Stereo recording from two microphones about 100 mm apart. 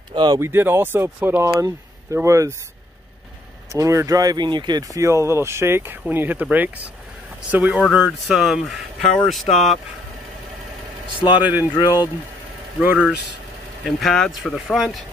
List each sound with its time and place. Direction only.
0.1 s a sound: 45° right (ahead or behind)
0.4 s speech: 20° right (ahead or behind)
3.7 s speech: 30° right (ahead or behind)
7.9 s speech: 5° right (ahead or behind)
11.3 s speech: 15° right (ahead or behind)
11.7 s speech: 45° left (ahead or behind)
12.8 s speech: 10° right (ahead or behind)
13.8 s speech: centre (ahead or behind)